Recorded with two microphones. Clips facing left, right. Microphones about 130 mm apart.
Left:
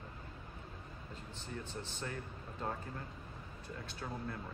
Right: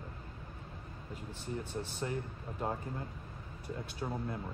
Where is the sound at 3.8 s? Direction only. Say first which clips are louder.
Right 4 dB; 15° right (ahead or behind).